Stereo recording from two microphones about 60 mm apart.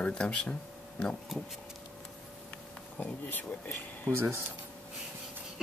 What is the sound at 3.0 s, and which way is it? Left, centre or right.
Speech, left.